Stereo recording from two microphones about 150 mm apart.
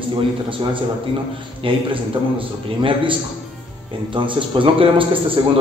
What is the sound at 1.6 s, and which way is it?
A man's voice, 35° right (ahead or behind).